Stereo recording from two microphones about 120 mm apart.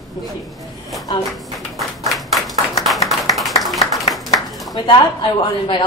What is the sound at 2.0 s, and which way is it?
Clapping, centre (ahead or behind).